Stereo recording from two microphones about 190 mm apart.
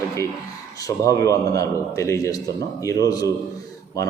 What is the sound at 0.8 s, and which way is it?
A man's voice, 15° left (ahead or behind).